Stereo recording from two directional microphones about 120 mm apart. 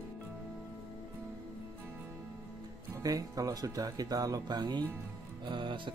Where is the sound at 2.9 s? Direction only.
30° right (ahead or behind).